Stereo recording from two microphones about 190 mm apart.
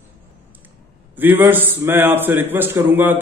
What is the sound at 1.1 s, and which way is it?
A man's voice, 10° right (ahead or behind).